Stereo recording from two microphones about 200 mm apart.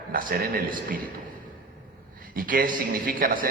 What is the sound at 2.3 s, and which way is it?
Speech, 45° right (ahead or behind).